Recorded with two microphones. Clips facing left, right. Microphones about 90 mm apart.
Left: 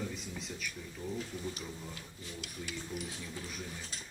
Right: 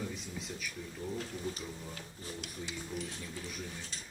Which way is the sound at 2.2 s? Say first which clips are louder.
Right 3 dB; 40° right (ahead or behind).